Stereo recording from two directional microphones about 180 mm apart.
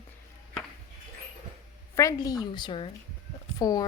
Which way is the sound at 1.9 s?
20° left (ahead or behind).